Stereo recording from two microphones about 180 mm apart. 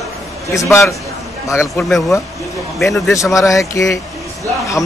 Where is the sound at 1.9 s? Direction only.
Centre (ahead or behind).